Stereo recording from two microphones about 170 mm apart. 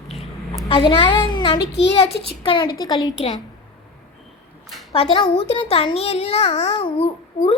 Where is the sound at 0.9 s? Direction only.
30° left (ahead or behind).